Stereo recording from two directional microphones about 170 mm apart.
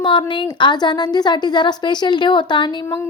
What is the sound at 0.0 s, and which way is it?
A woman's voice, 30° left (ahead or behind).